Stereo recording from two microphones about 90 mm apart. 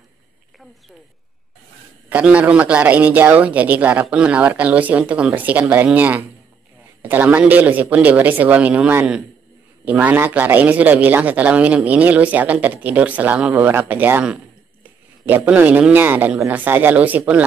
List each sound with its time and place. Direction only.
2.0 s a man's voice: 15° right (ahead or behind)
14.2 s a sound: 10° right (ahead or behind)
15.2 s a man's voice: 20° right (ahead or behind)